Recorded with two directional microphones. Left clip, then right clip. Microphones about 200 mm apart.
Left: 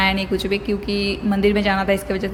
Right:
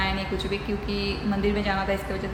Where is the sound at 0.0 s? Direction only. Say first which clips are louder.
Left 8 dB; 50° left (ahead or behind).